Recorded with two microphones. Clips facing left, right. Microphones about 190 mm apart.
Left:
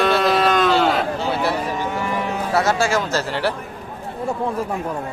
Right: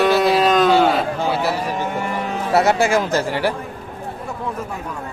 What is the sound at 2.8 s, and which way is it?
Speech, 20° right (ahead or behind).